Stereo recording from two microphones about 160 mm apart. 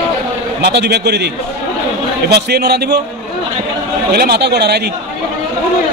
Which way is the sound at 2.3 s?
90° right.